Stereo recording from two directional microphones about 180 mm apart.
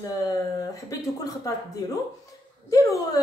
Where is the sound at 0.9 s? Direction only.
20° left (ahead or behind).